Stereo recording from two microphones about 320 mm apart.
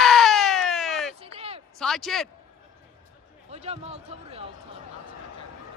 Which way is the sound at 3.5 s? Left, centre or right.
Centre.